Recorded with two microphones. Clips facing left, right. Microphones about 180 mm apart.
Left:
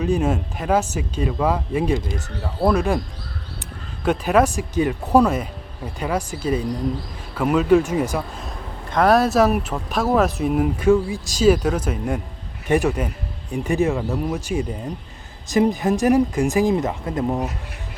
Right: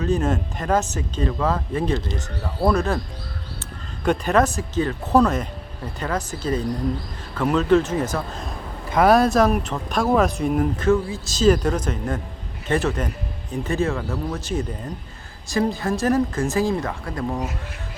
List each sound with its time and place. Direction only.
0.0 s speech: 10° left (ahead or behind)
4.0 s speech: 5° left (ahead or behind)
8.9 s speech: centre (ahead or behind); by 17.5 s 20° left (ahead or behind)